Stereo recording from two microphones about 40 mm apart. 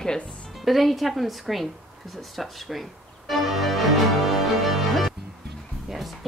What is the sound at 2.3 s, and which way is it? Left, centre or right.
Music, centre.